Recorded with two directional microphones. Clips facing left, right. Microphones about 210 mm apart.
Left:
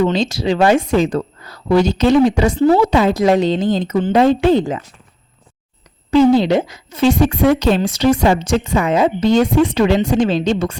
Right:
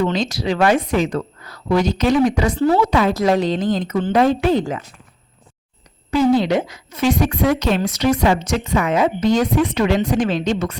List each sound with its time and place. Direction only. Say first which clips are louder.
0.1 s a woman's voice: left 3 dB; 25° left (ahead or behind)
6.3 s a woman's voice: left 3 dB; 30° left (ahead or behind)